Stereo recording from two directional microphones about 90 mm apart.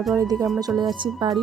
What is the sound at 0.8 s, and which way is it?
Speech, 55° right (ahead or behind).